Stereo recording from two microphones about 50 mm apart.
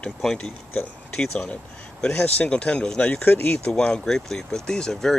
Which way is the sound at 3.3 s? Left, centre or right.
Left.